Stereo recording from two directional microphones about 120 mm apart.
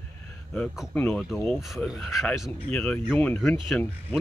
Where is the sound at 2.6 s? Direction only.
10° left (ahead or behind).